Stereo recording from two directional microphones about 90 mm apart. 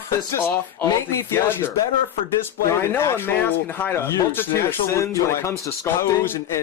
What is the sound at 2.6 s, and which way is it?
Speech, 30° left (ahead or behind).